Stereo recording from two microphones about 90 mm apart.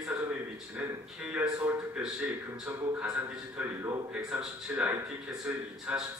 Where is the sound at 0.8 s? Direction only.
15° right (ahead or behind).